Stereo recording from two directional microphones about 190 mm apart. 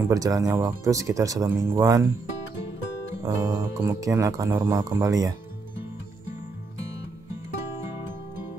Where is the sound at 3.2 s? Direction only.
15° right (ahead or behind).